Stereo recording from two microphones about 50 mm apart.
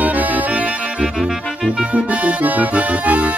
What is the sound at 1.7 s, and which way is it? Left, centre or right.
Music, right.